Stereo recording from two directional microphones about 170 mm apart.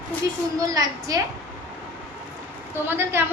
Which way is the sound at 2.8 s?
15° right (ahead or behind).